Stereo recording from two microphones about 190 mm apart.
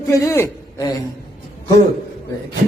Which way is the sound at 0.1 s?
15° left (ahead or behind).